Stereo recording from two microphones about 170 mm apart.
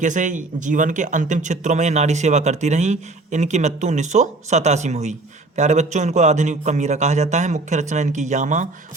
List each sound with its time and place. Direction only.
0.0 s speech: 45° right (ahead or behind)